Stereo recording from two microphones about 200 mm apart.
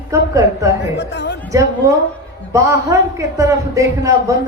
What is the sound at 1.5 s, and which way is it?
A man's voice, 15° right (ahead or behind).